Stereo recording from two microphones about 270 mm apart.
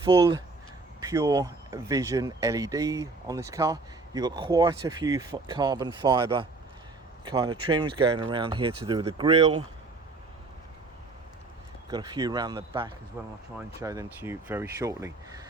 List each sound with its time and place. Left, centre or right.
0.0 s speech: centre
11.9 s speech: centre